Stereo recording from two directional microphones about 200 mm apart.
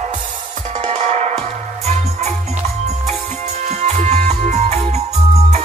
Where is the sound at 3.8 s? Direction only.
35° right (ahead or behind).